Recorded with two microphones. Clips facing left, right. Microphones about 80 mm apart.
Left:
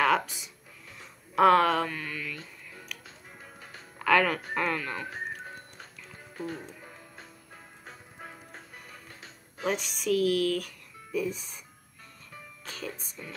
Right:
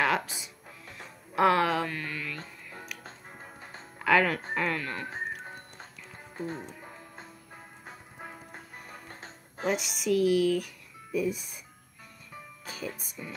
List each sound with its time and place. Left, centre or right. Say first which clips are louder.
0.0 s speech: left 2 dB; centre
2.3 s music: right 2 dB; right
3.4 s music: right 1 dB; right
4.0 s speech: even; centre
6.3 s speech: right 1 dB; right
7.2 s music: right 2 dB; centre
8.7 s music: right 3 dB; right
9.7 s speech: even; centre
12.6 s speech: right 1 dB; centre